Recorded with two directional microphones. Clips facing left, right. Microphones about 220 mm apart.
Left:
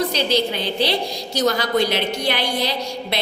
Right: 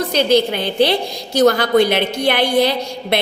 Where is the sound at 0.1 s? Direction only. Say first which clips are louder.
Right 6 dB; 55° right (ahead or behind).